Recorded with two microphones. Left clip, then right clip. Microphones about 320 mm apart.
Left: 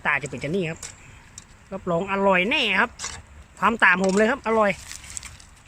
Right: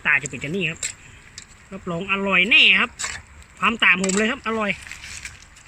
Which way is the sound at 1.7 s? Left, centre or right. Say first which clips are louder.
Even; centre.